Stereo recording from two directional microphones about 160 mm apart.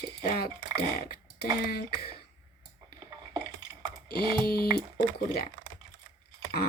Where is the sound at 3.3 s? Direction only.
25° right (ahead or behind).